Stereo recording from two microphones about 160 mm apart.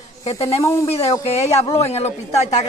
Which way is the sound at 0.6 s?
20° left (ahead or behind).